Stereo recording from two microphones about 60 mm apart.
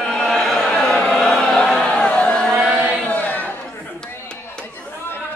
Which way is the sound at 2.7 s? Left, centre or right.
Right.